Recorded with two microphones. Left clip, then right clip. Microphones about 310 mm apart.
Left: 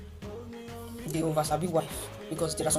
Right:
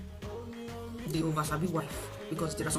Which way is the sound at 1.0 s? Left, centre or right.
Centre.